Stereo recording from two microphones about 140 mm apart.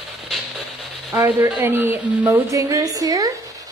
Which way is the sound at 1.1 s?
15° right (ahead or behind).